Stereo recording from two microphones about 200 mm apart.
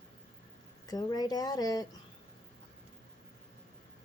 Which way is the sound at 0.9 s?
20° left (ahead or behind).